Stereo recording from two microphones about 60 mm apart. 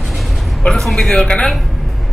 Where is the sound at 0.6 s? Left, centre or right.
Centre.